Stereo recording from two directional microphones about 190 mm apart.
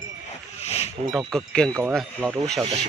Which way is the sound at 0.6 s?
35° left (ahead or behind).